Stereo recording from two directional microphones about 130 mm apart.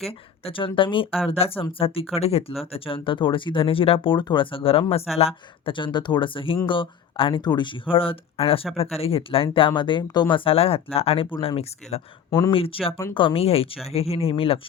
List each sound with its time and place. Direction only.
0.0 s speech: 50° left (ahead or behind)